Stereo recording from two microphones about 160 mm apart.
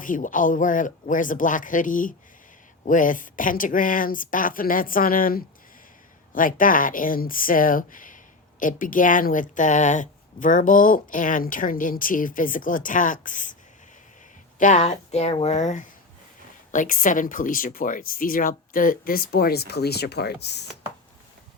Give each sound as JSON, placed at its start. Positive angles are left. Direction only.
{"t": 0.0, "sound": "speech", "side_deg": 55}
{"t": 14.6, "sound": "speech", "side_deg": 45}